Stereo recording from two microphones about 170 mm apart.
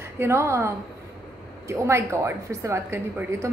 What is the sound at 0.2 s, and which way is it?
Speech, 15° right (ahead or behind).